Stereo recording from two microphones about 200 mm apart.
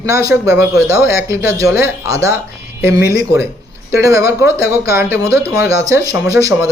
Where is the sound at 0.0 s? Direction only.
15° right (ahead or behind).